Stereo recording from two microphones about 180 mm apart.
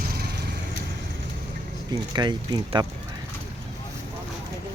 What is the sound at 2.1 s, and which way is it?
Speech, 25° right (ahead or behind).